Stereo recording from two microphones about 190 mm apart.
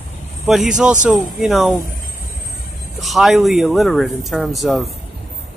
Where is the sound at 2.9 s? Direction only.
Centre (ahead or behind).